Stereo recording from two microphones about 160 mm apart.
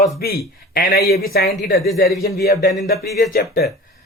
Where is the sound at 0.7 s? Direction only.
75° left (ahead or behind).